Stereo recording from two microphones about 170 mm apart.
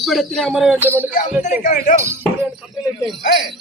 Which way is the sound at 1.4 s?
45° left (ahead or behind).